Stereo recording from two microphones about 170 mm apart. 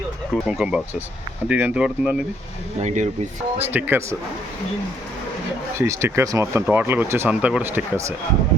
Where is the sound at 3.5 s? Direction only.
10° right (ahead or behind).